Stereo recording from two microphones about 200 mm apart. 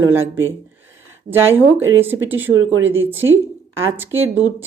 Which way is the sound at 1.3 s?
10° right (ahead or behind).